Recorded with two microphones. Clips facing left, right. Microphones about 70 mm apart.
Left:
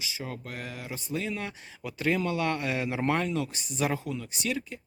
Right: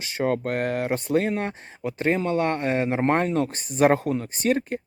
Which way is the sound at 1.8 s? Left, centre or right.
Right.